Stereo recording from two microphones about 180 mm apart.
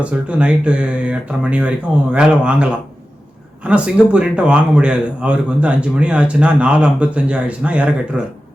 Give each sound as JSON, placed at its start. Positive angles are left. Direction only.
{"t": 0.0, "sound": "a man's voice", "side_deg": -5}